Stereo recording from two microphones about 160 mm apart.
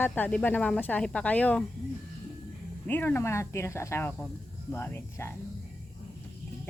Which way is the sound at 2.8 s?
10° left (ahead or behind).